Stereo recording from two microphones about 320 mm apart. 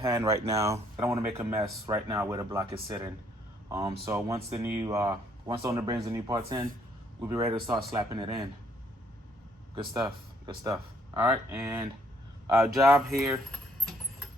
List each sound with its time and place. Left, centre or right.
0.0 s speech: centre
9.7 s speech: centre